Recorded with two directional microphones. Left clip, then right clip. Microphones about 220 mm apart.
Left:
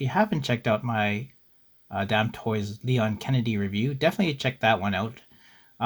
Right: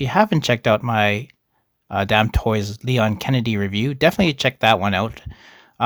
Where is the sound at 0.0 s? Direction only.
40° right (ahead or behind).